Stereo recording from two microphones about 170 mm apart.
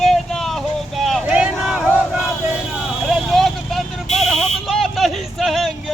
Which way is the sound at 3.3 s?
Centre (ahead or behind).